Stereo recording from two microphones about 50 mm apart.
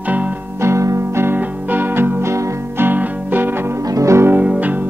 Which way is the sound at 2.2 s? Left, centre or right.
Right.